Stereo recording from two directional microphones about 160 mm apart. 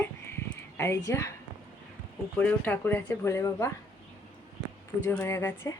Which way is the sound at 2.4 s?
10° left (ahead or behind).